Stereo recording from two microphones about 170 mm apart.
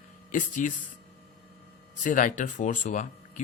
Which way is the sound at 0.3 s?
50° left (ahead or behind).